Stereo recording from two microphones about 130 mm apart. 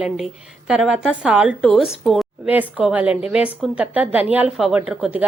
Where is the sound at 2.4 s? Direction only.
10° right (ahead or behind).